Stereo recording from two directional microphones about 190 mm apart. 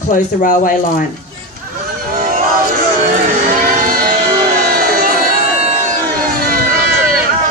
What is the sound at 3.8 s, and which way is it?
Music, 50° right (ahead or behind).